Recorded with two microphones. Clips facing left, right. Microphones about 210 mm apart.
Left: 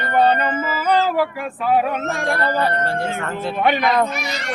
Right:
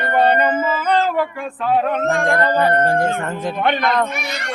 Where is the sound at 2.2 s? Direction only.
15° right (ahead or behind).